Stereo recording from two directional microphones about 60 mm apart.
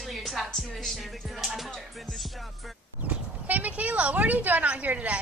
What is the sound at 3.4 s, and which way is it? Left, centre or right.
Speech, right.